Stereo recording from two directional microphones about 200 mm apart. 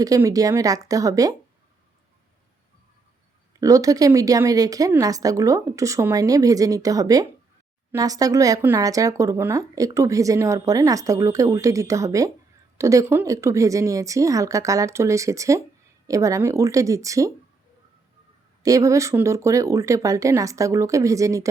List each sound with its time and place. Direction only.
0.0 s speech: 15° right (ahead or behind)
3.6 s speech: 15° right (ahead or behind)
18.6 s speech: 15° right (ahead or behind)